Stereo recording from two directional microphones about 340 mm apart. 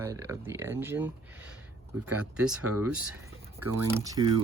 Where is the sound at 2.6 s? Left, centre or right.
Right.